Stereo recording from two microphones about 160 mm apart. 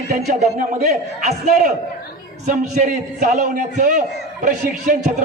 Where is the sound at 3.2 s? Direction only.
50° right (ahead or behind).